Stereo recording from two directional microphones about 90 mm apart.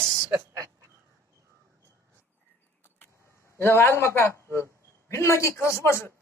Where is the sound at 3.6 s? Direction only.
25° left (ahead or behind).